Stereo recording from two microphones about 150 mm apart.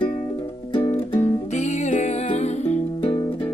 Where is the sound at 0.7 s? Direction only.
40° left (ahead or behind).